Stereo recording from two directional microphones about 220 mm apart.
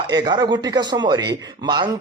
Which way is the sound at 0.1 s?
20° right (ahead or behind).